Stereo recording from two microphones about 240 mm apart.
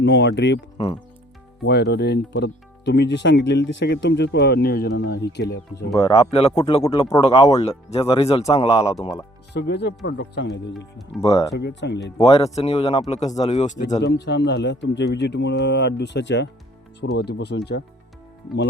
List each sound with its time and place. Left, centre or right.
0.0 s speech: left
1.6 s speech: left
5.9 s speech: left
9.5 s speech: left
12.1 s speech: centre
12.5 s speech: left
14.0 s speech: left